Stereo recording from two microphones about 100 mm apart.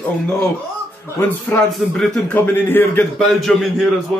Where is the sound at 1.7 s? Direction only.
5° left (ahead or behind).